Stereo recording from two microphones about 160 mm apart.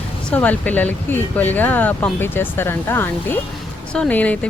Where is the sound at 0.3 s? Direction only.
10° left (ahead or behind).